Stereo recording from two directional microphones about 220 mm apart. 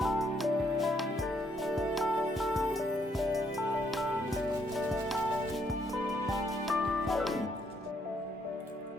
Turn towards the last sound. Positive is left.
turn(degrees=0)  # may be behind; listen again after turning